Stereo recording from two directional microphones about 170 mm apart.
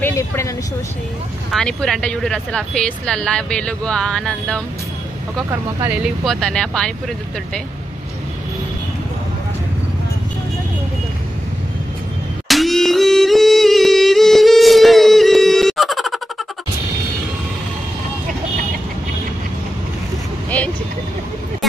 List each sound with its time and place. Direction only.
0.0 s a sound: 15° left (ahead or behind)
1.5 s speech: 5° left (ahead or behind)
5.9 s speech: centre (ahead or behind)
12.4 s music: centre (ahead or behind)
20.4 s vehicle: 10° left (ahead or behind)